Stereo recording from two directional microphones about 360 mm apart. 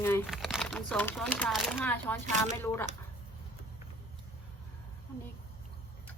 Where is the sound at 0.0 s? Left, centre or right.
Centre.